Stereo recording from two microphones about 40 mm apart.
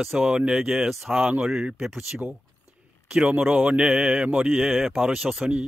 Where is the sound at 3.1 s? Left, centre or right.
Right.